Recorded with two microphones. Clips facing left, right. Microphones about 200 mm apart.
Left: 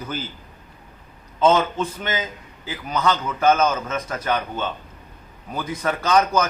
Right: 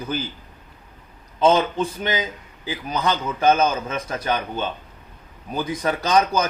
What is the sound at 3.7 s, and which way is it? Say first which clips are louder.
Speech: even; 15° right (ahead or behind).